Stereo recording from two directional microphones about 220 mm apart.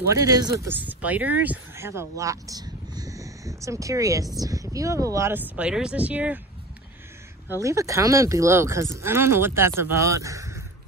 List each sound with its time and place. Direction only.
0.1 s speech: 15° right (ahead or behind)
7.6 s speech: 15° right (ahead or behind)